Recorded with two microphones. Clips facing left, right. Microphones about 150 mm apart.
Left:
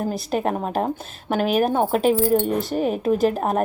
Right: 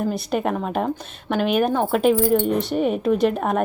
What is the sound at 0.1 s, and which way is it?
Speech, centre (ahead or behind).